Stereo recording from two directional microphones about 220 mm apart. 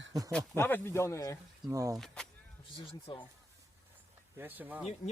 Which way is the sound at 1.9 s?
Centre (ahead or behind).